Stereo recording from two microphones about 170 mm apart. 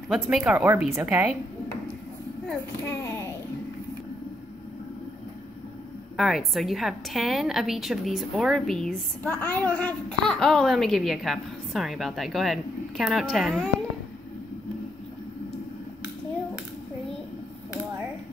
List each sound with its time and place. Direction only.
0.1 s a child's voice: 5° right (ahead or behind)
2.8 s a child's voice: 15° left (ahead or behind)
6.1 s a child's voice: centre (ahead or behind)